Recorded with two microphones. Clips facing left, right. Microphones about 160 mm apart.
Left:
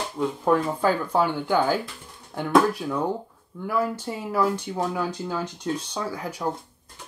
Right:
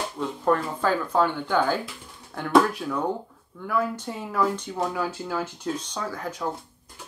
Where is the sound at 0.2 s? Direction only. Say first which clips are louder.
Left 2 dB; 10° left (ahead or behind).